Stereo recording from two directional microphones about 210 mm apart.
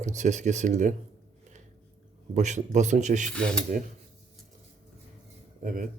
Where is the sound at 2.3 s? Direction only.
35° right (ahead or behind).